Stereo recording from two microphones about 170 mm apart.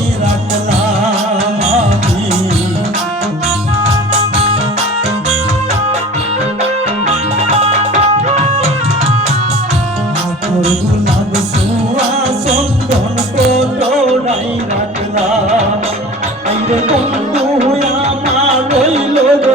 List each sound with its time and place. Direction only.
3.8 s music: 35° right (ahead or behind)
7.1 s music: 35° right (ahead or behind)
13.5 s music: 35° right (ahead or behind)
16.5 s music: 40° right (ahead or behind)